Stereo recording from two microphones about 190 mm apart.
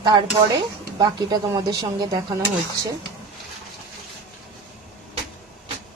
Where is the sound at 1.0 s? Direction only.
20° right (ahead or behind).